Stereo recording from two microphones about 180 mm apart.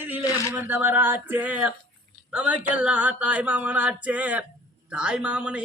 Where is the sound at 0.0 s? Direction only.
10° right (ahead or behind).